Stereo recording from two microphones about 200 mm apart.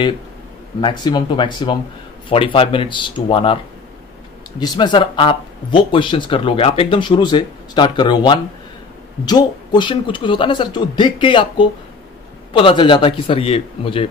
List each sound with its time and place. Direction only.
0.7 s speech: 20° left (ahead or behind)
4.6 s speech: 25° left (ahead or behind)